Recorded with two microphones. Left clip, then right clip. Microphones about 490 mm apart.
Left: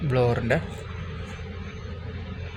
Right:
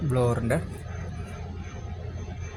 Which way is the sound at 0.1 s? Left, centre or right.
Right.